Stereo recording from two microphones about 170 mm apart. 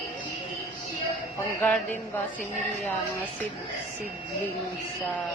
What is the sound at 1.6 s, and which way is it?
Speech, 10° left (ahead or behind).